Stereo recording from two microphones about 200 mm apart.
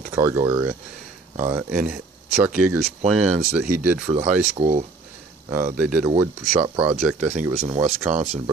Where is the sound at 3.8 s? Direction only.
10° right (ahead or behind).